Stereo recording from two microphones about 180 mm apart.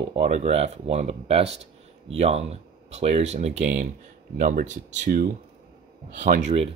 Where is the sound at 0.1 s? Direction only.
35° right (ahead or behind).